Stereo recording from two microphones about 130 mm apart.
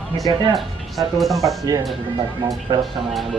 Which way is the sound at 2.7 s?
35° right (ahead or behind).